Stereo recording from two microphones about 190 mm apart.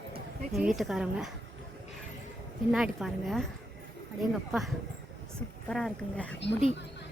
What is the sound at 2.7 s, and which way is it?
Speech, centre (ahead or behind).